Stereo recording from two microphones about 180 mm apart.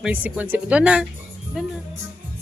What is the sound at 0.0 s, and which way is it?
Speech, 10° right (ahead or behind).